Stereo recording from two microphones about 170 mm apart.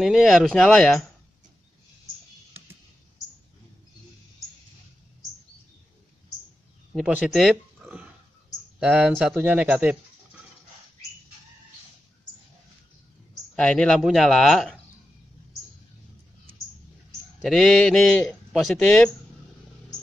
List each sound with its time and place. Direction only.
0.0 s a man's voice: centre (ahead or behind)
7.1 s speech: 5° right (ahead or behind)
13.6 s a man's voice: 5° left (ahead or behind)
17.4 s a man's voice: centre (ahead or behind)